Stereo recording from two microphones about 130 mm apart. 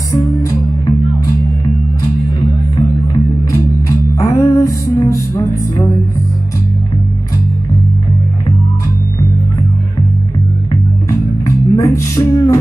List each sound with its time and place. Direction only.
0.1 s music: 25° left (ahead or behind)
4.1 s music: 25° left (ahead or behind)
10.7 s music: 25° left (ahead or behind)